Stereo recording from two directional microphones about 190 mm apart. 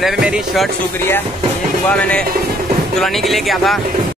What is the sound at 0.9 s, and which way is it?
Speech, 10° left (ahead or behind).